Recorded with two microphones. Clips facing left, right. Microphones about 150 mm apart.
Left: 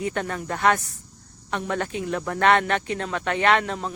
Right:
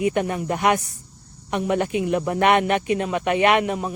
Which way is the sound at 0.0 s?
15° right (ahead or behind).